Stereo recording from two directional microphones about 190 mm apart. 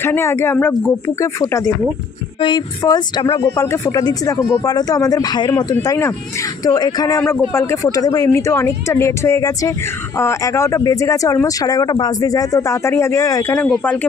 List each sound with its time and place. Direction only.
0.0 s speech: 10° left (ahead or behind)
7.2 s speech: 10° left (ahead or behind)